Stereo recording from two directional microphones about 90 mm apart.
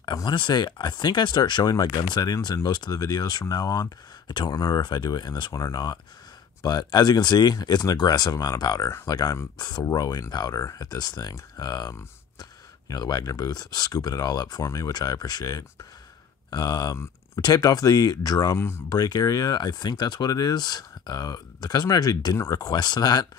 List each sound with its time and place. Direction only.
0.0 s speech: 55° left (ahead or behind)